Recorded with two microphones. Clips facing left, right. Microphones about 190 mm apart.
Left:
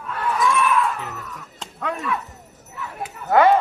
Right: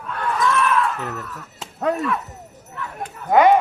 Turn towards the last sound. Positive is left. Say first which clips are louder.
# right 1 dB
turn(degrees=-15)  # may be behind; listen again after turning